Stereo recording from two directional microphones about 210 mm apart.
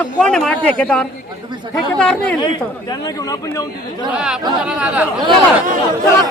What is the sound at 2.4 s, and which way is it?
Speech, 20° left (ahead or behind).